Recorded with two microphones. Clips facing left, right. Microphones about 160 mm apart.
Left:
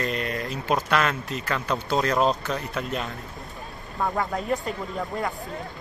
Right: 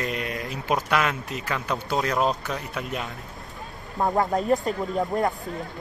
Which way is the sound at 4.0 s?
20° right (ahead or behind).